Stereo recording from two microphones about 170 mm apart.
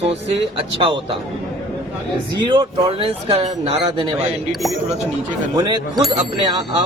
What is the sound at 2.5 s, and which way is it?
A man's voice, 30° right (ahead or behind).